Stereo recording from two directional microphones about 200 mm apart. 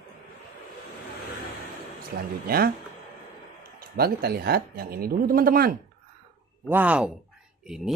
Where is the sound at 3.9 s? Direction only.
50° right (ahead or behind).